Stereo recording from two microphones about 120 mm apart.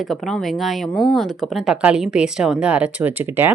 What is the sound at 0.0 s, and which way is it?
Speech, centre (ahead or behind).